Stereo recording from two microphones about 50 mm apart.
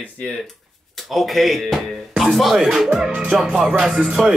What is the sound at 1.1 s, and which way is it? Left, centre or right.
Speech, centre.